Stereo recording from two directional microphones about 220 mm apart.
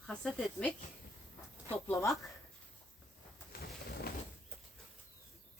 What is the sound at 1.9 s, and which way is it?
Speech, 10° left (ahead or behind).